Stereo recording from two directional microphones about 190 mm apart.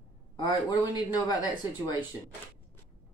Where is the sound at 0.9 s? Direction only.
20° left (ahead or behind).